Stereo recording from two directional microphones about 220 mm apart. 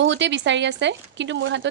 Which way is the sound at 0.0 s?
55° right (ahead or behind).